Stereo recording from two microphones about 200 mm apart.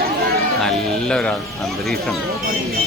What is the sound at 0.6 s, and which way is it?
Speech, 5° left (ahead or behind).